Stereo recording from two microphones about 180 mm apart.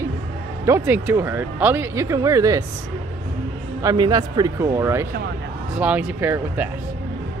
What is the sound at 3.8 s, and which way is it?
Speech, 20° right (ahead or behind).